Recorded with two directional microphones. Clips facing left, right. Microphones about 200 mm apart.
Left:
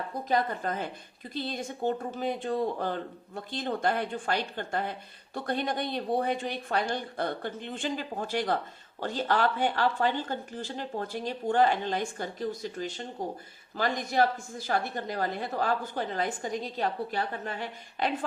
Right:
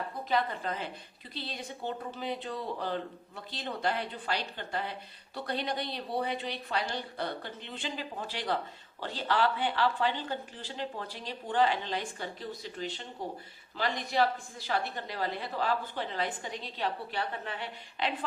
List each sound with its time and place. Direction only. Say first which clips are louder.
0.1 s speech: left 4 dB; 45° left (ahead or behind)